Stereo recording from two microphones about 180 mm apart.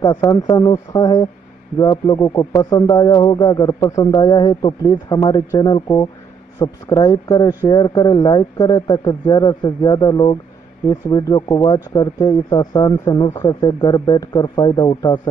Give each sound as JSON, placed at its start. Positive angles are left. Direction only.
{"t": 0.0, "sound": "speech", "side_deg": 20}